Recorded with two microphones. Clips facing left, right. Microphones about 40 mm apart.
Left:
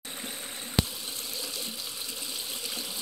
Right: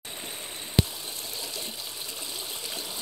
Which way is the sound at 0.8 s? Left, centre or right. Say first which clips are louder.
Right 3 dB; right.